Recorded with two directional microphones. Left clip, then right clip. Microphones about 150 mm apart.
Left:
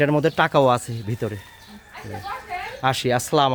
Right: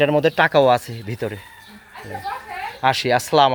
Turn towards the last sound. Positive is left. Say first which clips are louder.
# right 4 dB
turn(degrees=15)  # may be behind; listen again after turning